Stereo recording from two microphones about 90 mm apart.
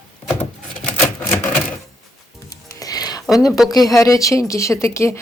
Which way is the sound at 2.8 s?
45° left (ahead or behind).